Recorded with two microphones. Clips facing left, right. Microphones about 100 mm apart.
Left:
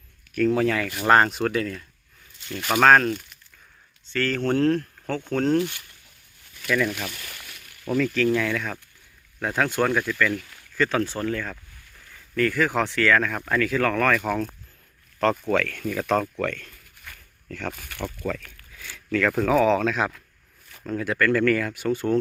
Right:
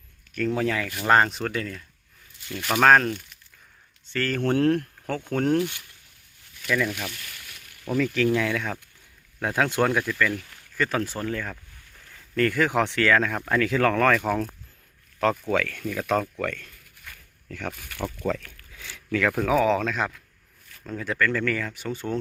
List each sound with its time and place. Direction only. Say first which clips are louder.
0.4 s speech: left 4 dB; 5° right (ahead or behind)
4.2 s speech: left 1 dB; 15° right (ahead or behind)
6.7 s speech: left 2 dB; centre (ahead or behind); by 10.4 s 20° right (ahead or behind)
10.5 s a sound: left 3 dB; 5° right (ahead or behind)
11.0 s speech: left 3 dB; 5° right (ahead or behind)
11.3 s speech: left 2 dB; 20° right (ahead or behind)
18.8 s speech: left 1 dB; 20° right (ahead or behind); by 21.8 s 5° left (ahead or behind)